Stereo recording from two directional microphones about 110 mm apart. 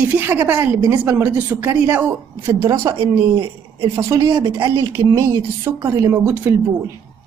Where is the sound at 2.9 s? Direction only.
60° right (ahead or behind).